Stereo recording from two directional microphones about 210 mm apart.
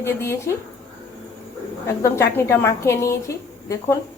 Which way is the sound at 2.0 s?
15° left (ahead or behind).